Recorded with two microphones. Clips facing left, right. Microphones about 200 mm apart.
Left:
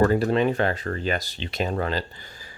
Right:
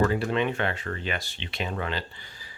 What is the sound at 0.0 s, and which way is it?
Speech, 40° left (ahead or behind).